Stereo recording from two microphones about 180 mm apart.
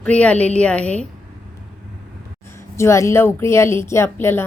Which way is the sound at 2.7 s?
15° left (ahead or behind).